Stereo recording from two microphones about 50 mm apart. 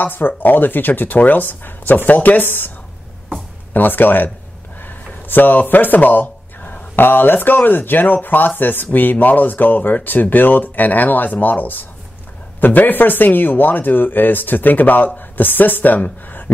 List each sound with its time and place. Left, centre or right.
0.0 s speech: left
3.7 s speech: left